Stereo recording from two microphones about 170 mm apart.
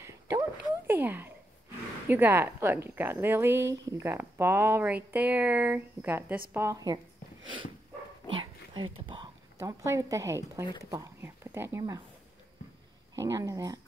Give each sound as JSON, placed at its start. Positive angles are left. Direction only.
{"t": 0.0, "sound": "a sound", "side_deg": -20}
{"t": 2.0, "sound": "speech", "side_deg": -10}
{"t": 8.4, "sound": "a sound", "side_deg": -30}
{"t": 9.6, "sound": "speech", "side_deg": -15}
{"t": 10.6, "sound": "speech", "side_deg": 25}
{"t": 10.9, "sound": "speech", "side_deg": -15}
{"t": 13.1, "sound": "speech", "side_deg": -20}